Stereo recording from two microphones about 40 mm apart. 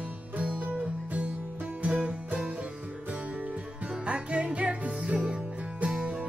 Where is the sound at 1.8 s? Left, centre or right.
Right.